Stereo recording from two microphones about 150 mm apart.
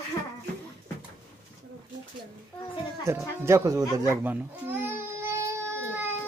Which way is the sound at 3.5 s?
20° right (ahead or behind).